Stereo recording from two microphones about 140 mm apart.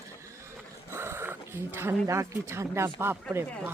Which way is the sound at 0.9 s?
15° right (ahead or behind).